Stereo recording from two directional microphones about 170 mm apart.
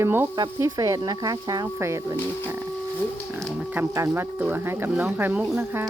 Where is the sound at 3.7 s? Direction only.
10° right (ahead or behind).